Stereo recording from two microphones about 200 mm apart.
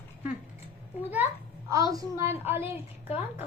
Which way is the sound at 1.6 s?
15° right (ahead or behind).